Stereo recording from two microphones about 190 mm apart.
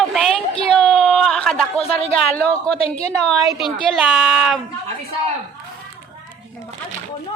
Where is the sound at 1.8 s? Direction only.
30° left (ahead or behind).